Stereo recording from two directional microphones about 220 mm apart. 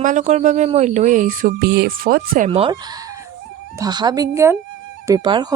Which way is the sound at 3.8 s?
20° right (ahead or behind).